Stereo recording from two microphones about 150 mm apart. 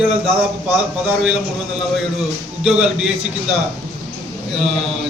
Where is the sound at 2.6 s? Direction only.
5° right (ahead or behind).